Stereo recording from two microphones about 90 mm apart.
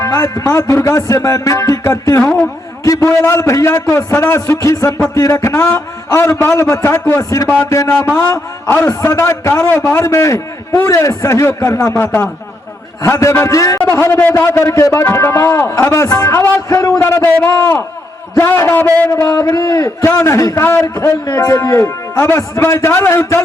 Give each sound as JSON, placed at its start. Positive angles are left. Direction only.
{"t": 0.0, "sound": "a man's voice", "side_deg": 35}
{"t": 2.2, "sound": "a man's voice", "side_deg": 10}
{"t": 2.8, "sound": "a man's voice", "side_deg": 35}
{"t": 13.0, "sound": "a man's voice", "side_deg": 35}
{"t": 13.9, "sound": "a man's voice", "side_deg": 25}